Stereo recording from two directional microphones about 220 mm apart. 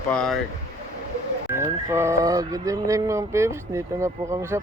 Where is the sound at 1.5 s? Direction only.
10° right (ahead or behind).